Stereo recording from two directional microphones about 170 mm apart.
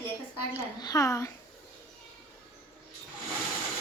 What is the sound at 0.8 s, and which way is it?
Speech, 20° left (ahead or behind).